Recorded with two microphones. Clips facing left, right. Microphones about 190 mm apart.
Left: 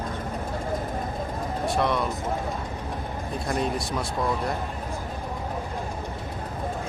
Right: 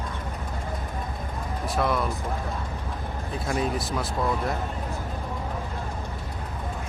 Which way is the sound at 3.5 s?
Centre (ahead or behind).